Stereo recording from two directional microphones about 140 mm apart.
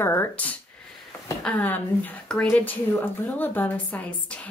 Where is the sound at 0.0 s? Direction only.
15° left (ahead or behind).